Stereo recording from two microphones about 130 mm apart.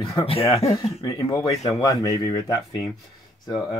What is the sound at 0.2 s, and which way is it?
Speech, 50° left (ahead or behind).